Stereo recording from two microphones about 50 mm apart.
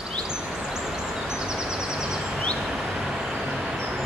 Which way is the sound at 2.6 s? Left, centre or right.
Centre.